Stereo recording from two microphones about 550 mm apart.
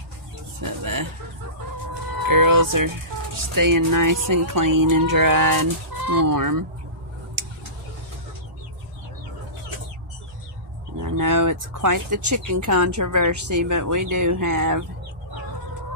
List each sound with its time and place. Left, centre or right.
0.6 s speech: right
2.2 s music: right
3.5 s speech: right
11.0 s speech: right